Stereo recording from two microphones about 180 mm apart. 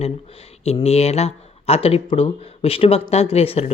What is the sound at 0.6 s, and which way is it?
Speech, 35° left (ahead or behind).